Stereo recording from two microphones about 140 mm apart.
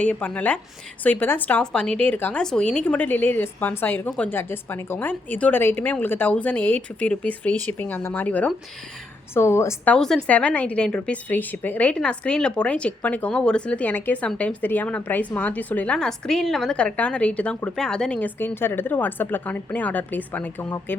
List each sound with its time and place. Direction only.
0.0 s a woman's voice: 10° left (ahead or behind)
9.9 s a woman's voice: 5° left (ahead or behind)